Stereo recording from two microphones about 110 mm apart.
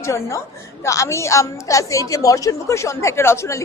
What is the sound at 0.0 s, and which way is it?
A woman's voice, 25° left (ahead or behind).